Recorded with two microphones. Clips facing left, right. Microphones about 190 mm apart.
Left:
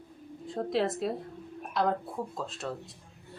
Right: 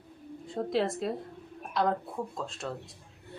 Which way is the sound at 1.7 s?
Centre (ahead or behind).